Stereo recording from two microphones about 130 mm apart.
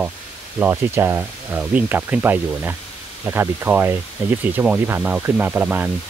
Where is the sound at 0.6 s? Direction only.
20° right (ahead or behind).